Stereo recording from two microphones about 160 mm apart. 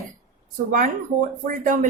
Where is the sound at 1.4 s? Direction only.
55° right (ahead or behind).